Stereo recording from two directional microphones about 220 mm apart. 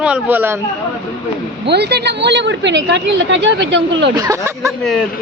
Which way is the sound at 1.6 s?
50° right (ahead or behind).